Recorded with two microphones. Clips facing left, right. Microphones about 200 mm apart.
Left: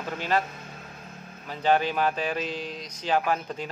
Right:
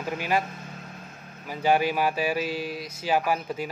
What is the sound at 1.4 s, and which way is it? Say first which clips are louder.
Speech: right 1 dB; 10° right (ahead or behind).